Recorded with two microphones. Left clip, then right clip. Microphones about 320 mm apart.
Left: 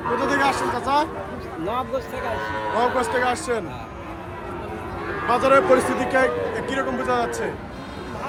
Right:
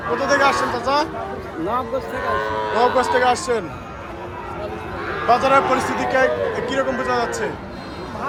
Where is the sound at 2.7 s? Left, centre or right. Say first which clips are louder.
Right 4 dB; centre.